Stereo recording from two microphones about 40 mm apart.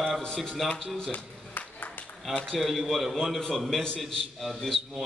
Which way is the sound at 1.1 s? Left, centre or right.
Left.